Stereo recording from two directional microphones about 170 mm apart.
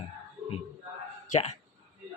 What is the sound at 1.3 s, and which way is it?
Speech, 40° left (ahead or behind).